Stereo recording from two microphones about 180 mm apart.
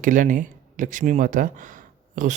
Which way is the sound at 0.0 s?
45° right (ahead or behind).